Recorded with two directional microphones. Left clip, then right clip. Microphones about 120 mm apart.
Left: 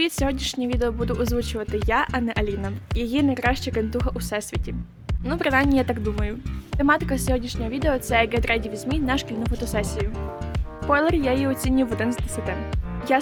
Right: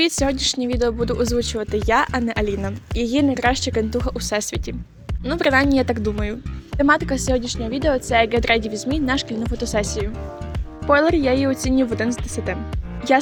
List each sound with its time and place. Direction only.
0.0 s speech: 25° right (ahead or behind)